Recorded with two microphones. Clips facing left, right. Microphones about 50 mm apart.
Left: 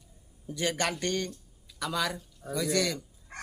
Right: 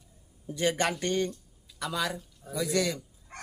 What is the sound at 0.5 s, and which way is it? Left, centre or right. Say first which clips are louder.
Speech: right 2 dB; centre.